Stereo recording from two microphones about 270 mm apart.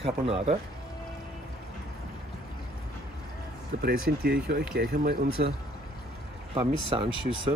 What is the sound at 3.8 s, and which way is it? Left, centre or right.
Speech, right.